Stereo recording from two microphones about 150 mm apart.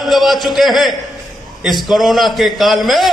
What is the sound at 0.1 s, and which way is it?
A man's voice, centre (ahead or behind).